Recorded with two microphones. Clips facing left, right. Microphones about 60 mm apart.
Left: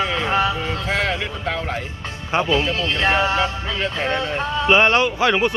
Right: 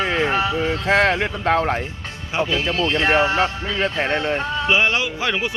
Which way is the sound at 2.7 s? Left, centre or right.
Right.